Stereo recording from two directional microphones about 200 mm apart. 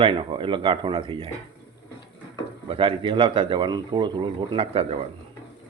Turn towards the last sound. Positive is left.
turn(degrees=-30)  # may be behind; listen again after turning